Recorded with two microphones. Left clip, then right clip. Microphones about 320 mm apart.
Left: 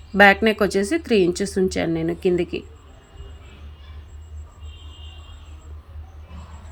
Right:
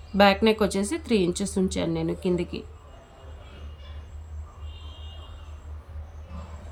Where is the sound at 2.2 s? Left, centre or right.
Left.